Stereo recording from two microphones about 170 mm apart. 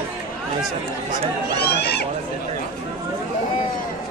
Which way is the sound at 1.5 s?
75° left (ahead or behind).